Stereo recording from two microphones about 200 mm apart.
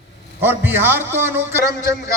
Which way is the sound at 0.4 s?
10° right (ahead or behind).